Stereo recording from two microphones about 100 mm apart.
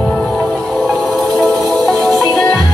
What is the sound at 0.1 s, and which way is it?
Music, centre (ahead or behind).